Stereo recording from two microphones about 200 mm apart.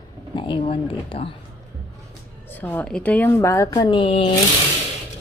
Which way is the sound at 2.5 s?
10° left (ahead or behind).